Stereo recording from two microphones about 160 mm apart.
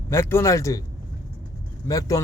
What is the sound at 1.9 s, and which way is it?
Speech, 20° left (ahead or behind).